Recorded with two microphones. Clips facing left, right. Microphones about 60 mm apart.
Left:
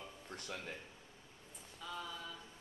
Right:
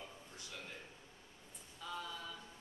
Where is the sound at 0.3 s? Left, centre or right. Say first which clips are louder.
Left 9 dB; left.